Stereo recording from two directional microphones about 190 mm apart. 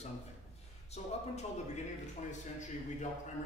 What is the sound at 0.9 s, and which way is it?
Speech, 35° left (ahead or behind).